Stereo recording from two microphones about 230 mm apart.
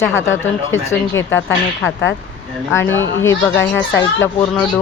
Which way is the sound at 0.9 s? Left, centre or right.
Centre.